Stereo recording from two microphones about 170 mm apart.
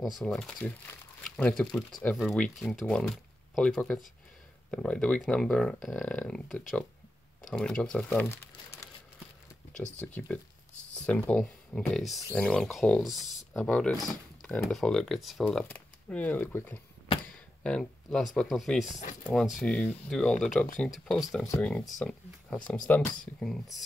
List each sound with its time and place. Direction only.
0.0 s speech: centre (ahead or behind)
9.9 s speech: 10° left (ahead or behind)
17.3 s a sound: 5° left (ahead or behind)
18.3 s speech: centre (ahead or behind)
18.9 s speech: 45° left (ahead or behind)
19.2 s speech: centre (ahead or behind)